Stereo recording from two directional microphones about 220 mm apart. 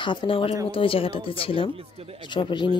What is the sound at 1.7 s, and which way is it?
Speech, 25° right (ahead or behind).